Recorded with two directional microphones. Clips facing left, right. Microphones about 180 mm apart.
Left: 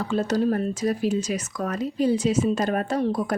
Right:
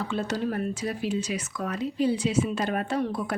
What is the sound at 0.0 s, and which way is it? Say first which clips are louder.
A woman's voice: left 6 dB; 40° left (ahead or behind).